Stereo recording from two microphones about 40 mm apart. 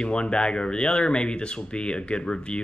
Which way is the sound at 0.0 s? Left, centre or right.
Left.